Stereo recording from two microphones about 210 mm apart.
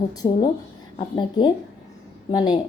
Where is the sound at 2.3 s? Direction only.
20° left (ahead or behind).